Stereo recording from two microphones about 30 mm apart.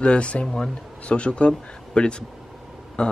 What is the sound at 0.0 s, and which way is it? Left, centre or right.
Speech, left.